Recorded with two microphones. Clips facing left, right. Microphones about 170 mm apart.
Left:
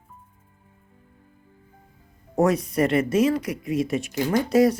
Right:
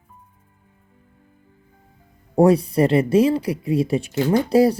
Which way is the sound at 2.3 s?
30° right (ahead or behind).